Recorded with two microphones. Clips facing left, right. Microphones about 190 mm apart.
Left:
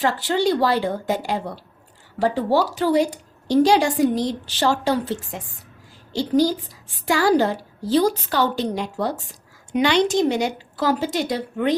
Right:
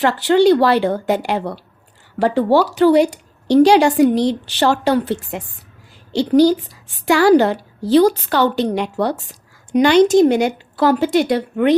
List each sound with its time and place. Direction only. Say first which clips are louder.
0.0 s speech: right 7 dB; 70° right (ahead or behind)
9.7 s a woman's voice: right 7 dB; 45° right (ahead or behind); by 11.8 s 65° right (ahead or behind)